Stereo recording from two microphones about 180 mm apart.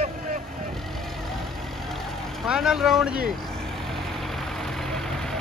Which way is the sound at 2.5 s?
5° right (ahead or behind).